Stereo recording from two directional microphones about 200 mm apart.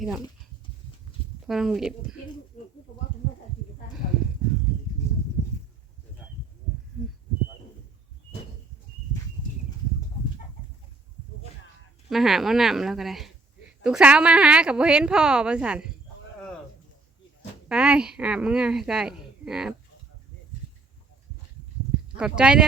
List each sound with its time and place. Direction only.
1.5 s a woman's voice: centre (ahead or behind)
4.0 s a sound: 40° left (ahead or behind)
12.0 s a woman's voice: centre (ahead or behind)
17.7 s a woman's voice: 5° right (ahead or behind)
22.2 s a woman's voice: 5° right (ahead or behind)